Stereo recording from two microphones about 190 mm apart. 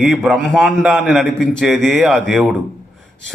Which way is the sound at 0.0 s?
Centre (ahead or behind).